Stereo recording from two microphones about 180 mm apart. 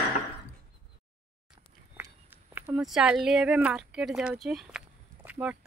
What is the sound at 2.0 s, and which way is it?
Speech, 10° right (ahead or behind).